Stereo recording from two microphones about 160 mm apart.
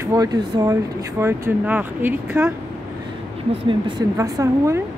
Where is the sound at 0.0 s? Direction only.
20° right (ahead or behind).